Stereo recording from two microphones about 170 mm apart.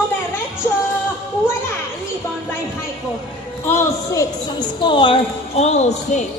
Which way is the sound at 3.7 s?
20° left (ahead or behind).